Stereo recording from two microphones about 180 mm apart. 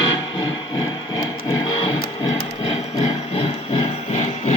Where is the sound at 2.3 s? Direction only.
35° left (ahead or behind).